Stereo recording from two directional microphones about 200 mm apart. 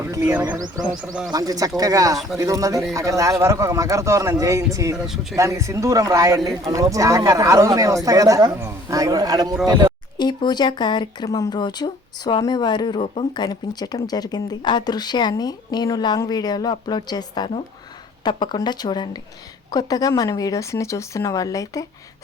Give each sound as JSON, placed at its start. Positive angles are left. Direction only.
{"t": 0.0, "sound": "speech", "side_deg": -10}
{"t": 5.0, "sound": "speech", "side_deg": 0}
{"t": 5.4, "sound": "speech", "side_deg": -15}
{"t": 10.2, "sound": "speech", "side_deg": 20}